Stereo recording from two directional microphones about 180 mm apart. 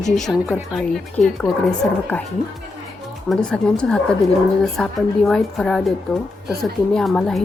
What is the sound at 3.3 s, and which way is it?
A woman's voice, 5° left (ahead or behind).